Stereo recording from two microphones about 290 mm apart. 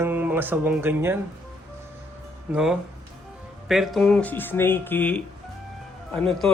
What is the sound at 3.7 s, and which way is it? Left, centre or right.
Speech, centre.